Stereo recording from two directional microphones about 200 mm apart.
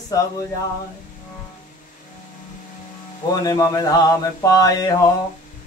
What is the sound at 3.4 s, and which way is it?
Mantra, 20° left (ahead or behind).